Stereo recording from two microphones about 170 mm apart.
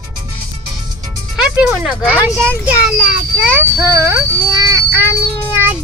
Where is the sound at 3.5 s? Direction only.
15° right (ahead or behind).